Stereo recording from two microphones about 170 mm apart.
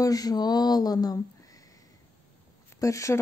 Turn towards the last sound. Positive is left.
turn(degrees=20)  # may be behind; listen again after turning